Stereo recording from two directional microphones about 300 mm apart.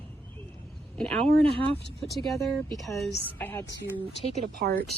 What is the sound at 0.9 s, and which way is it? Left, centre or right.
Speech, centre.